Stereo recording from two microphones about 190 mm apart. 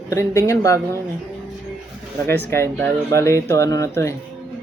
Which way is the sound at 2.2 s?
10° left (ahead or behind).